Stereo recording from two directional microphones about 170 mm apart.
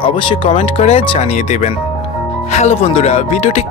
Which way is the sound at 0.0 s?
30° left (ahead or behind).